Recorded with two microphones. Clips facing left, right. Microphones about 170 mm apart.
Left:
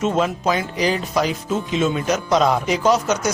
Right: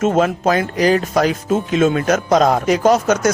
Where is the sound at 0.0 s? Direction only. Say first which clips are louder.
Right 4 dB; 50° right (ahead or behind).